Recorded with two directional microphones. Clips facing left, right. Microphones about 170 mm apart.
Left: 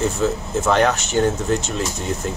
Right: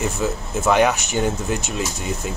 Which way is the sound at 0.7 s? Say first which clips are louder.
Right 1 dB; 10° right (ahead or behind).